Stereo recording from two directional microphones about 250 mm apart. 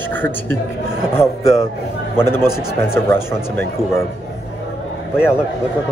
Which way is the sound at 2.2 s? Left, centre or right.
Centre.